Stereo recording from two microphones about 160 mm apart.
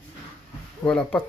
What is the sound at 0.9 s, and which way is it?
Speech, 10° left (ahead or behind).